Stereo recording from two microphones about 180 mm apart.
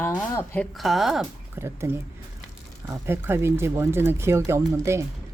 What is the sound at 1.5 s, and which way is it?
Speech, 15° right (ahead or behind).